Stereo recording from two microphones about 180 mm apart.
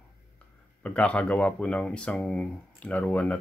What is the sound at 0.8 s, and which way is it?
Speech, 5° left (ahead or behind).